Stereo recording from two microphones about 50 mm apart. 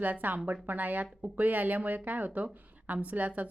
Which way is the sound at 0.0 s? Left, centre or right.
Right.